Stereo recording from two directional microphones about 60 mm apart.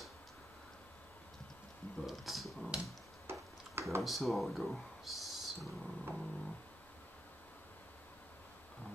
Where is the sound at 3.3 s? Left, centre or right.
Right.